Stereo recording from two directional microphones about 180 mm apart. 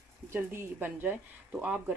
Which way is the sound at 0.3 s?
10° right (ahead or behind).